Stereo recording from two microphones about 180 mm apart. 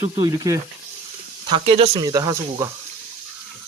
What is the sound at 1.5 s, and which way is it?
Speech, 30° right (ahead or behind).